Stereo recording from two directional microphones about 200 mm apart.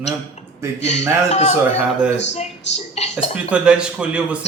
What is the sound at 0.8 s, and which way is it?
Speech, 35° left (ahead or behind).